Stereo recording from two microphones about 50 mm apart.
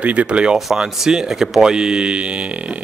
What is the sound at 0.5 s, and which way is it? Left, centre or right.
Speech, centre.